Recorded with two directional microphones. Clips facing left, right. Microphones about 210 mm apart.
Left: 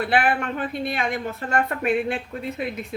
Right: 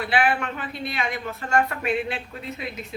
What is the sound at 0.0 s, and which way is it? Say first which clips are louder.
A woman's voice: left 1 dB; 55° left (ahead or behind).